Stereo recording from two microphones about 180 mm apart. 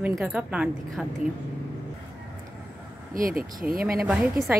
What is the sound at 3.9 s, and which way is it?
Speech, 5° right (ahead or behind).